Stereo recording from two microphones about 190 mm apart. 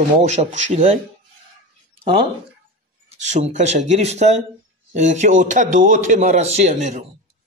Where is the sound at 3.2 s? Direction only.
40° right (ahead or behind).